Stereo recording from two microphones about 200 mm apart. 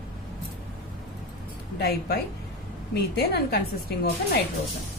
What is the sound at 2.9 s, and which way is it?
A woman's voice, 50° left (ahead or behind).